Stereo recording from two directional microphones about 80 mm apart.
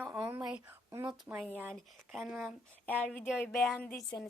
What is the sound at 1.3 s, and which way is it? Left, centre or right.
Speech, right.